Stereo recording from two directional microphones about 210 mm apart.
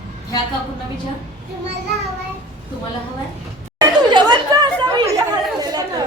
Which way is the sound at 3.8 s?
20° right (ahead or behind).